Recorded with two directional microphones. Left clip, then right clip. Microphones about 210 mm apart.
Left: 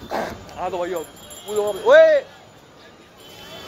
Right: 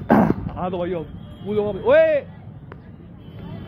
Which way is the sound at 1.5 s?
10° left (ahead or behind).